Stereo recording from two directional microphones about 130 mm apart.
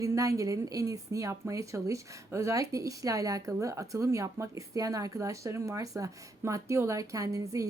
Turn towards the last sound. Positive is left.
turn(degrees=-25)  # may be behind; listen again after turning